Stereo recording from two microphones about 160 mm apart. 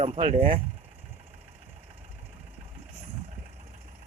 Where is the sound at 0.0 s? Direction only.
35° right (ahead or behind).